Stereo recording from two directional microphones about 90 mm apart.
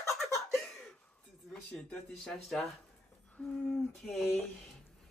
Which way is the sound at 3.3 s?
10° left (ahead or behind).